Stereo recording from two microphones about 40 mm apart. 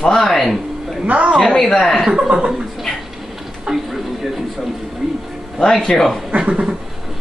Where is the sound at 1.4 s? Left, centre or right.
Centre.